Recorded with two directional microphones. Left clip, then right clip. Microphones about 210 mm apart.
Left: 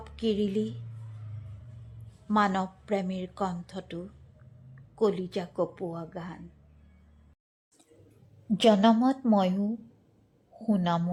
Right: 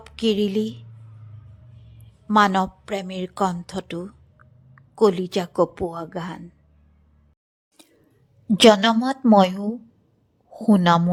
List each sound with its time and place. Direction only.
0.0 s speech: 25° right (ahead or behind)
2.2 s a woman's voice: 20° right (ahead or behind)
8.5 s a woman's voice: 40° right (ahead or behind)